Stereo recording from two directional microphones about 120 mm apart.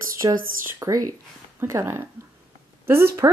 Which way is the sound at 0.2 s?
35° right (ahead or behind).